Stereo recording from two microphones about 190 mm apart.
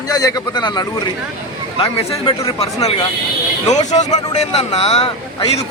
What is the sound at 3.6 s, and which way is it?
Speech, 40° left (ahead or behind).